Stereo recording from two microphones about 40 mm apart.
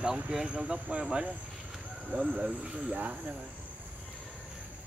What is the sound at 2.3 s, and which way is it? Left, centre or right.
Speech, right.